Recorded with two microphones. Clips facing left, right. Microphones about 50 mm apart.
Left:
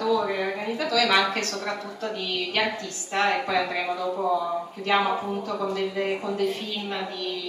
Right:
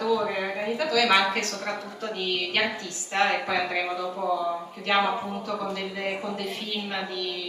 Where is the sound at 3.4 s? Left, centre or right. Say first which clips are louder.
Left 1 dB; centre.